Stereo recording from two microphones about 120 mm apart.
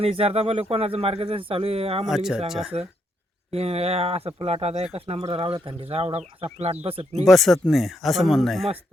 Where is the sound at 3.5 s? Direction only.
55° right (ahead or behind).